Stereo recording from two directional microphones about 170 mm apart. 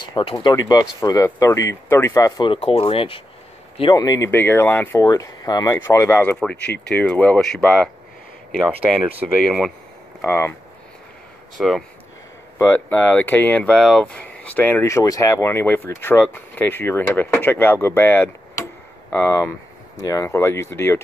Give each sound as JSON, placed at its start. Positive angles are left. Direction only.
{"t": 0.1, "sound": "speech", "side_deg": 25}
{"t": 9.4, "sound": "speech", "side_deg": 0}
{"t": 10.2, "sound": "speech", "side_deg": 15}
{"t": 11.5, "sound": "speech", "side_deg": 0}
{"t": 12.5, "sound": "speech", "side_deg": 10}